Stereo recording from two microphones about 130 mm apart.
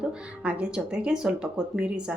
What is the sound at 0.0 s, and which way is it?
A woman's voice, 10° right (ahead or behind).